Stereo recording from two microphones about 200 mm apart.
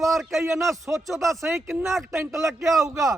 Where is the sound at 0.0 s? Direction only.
Centre (ahead or behind).